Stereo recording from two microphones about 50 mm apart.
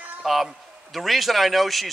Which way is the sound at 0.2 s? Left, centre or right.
Centre.